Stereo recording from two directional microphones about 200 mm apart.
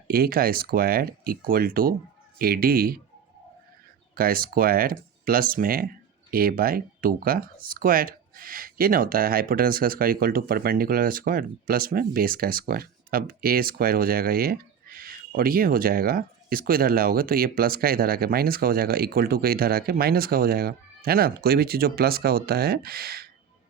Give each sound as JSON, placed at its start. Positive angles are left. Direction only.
{"t": 0.1, "sound": "speech", "side_deg": -50}
{"t": 4.1, "sound": "speech", "side_deg": -45}